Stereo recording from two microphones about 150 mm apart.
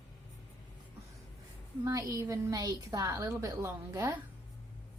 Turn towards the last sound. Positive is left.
turn(degrees=-20)  # may be behind; listen again after turning